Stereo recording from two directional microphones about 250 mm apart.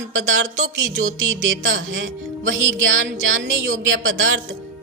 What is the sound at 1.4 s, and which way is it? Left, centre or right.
Speech, right.